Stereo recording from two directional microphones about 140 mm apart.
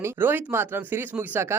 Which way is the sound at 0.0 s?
15° right (ahead or behind).